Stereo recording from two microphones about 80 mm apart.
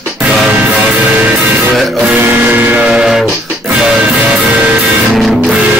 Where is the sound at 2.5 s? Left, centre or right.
Right.